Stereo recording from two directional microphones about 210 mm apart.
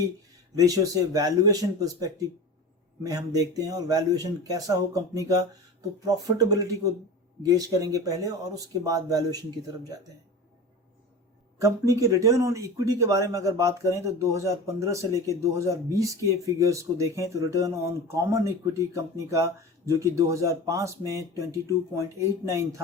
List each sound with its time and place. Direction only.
0.5 s speech: 15° right (ahead or behind)
11.6 s speech: 15° right (ahead or behind)